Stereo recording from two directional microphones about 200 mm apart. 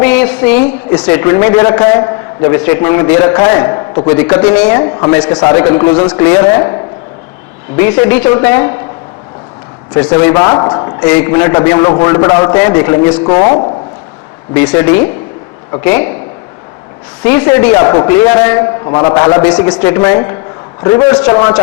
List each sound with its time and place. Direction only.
0.0 s a sound: 10° left (ahead or behind)
1.0 s a man's voice: 10° left (ahead or behind)
4.8 s a man's voice: 20° left (ahead or behind)
7.8 s a man's voice: 10° left (ahead or behind)
10.2 s a man's voice: 10° left (ahead or behind)
11.0 s a man's voice: 10° left (ahead or behind)
17.2 s a man's voice: 10° left (ahead or behind)